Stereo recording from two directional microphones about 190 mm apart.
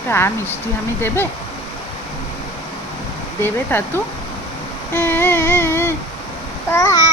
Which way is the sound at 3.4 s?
10° left (ahead or behind).